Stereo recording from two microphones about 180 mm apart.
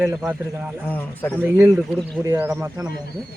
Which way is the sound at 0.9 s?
10° left (ahead or behind).